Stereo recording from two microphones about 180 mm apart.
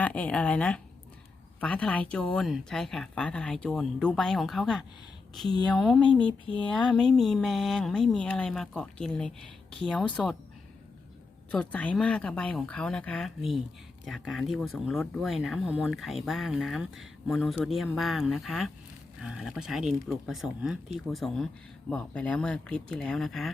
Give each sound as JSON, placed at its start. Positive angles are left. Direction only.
{"t": 0.0, "sound": "speech", "side_deg": 10}
{"t": 6.2, "sound": "a sound", "side_deg": 30}
{"t": 6.9, "sound": "speech", "side_deg": 5}
{"t": 11.5, "sound": "speech", "side_deg": 5}